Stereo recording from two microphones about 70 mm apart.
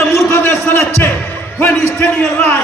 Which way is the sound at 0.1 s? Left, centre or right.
Left.